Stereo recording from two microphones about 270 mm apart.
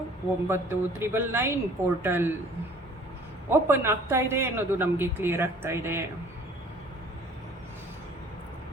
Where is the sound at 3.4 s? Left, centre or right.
Centre.